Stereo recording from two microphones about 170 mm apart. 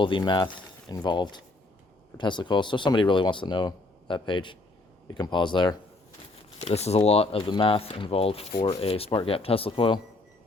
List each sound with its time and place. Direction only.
0.0 s speech: 30° left (ahead or behind)
6.6 s speech: 40° left (ahead or behind)